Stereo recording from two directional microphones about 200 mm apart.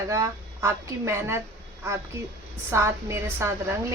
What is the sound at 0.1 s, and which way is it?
Speech, 15° right (ahead or behind).